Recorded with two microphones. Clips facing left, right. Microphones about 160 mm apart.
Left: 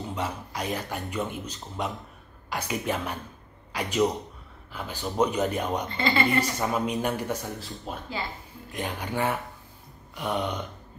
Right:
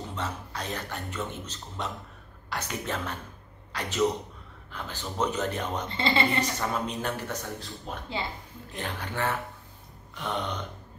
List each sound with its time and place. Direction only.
0.1 s a man's voice: 10° left (ahead or behind)
5.9 s speech: 30° right (ahead or behind)
6.4 s a man's voice: 10° left (ahead or behind)